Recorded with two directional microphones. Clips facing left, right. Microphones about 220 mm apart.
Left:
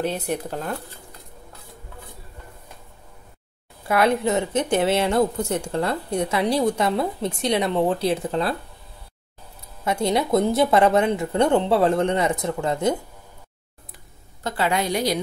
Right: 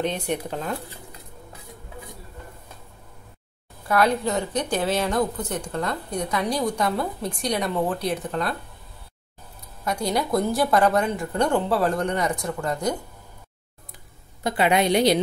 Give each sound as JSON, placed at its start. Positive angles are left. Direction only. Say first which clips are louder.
{"t": 0.0, "sound": "speech", "louder": "left 1 dB", "side_deg": 5}
{"t": 3.8, "sound": "a woman's voice", "louder": "left 2 dB", "side_deg": 25}
{"t": 9.8, "sound": "a woman's voice", "louder": "left 3 dB", "side_deg": 25}
{"t": 14.4, "sound": "a woman's voice", "louder": "right 3 dB", "side_deg": -15}